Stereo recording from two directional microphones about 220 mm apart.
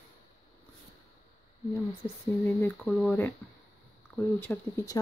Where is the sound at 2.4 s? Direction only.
10° left (ahead or behind).